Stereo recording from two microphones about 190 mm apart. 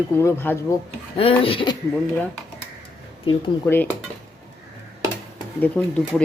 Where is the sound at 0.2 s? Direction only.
10° left (ahead or behind).